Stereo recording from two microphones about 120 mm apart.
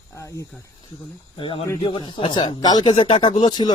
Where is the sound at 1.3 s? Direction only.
45° left (ahead or behind).